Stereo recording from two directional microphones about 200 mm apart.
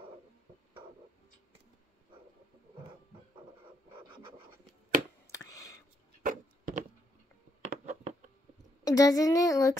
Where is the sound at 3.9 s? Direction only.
25° right (ahead or behind).